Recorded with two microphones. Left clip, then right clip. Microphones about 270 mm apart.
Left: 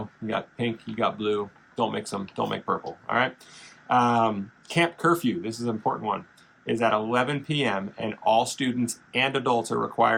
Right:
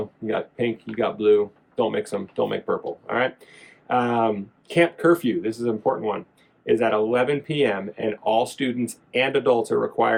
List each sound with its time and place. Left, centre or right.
0.3 s speech: centre